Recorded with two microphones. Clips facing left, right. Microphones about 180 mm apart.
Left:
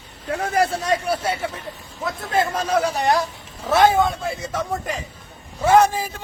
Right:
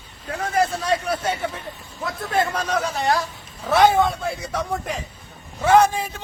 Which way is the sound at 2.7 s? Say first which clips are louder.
Left 3 dB; 10° left (ahead or behind).